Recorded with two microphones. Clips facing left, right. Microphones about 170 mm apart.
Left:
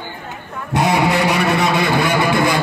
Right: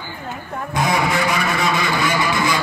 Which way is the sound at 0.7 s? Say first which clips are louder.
Left 4 dB; 65° left (ahead or behind).